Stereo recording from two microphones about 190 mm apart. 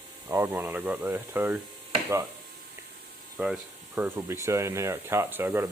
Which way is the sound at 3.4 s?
5° right (ahead or behind).